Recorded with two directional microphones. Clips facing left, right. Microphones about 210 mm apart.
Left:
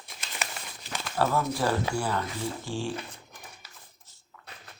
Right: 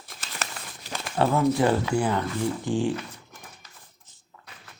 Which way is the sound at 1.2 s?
20° right (ahead or behind).